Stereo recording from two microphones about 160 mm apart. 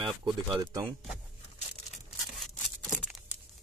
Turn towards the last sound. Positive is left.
turn(degrees=0)  # may be behind; listen again after turning